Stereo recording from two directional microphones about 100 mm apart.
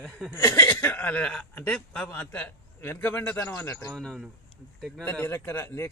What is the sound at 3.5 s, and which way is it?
Speech, 30° left (ahead or behind).